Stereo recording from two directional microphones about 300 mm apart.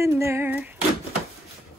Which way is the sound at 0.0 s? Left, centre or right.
Centre.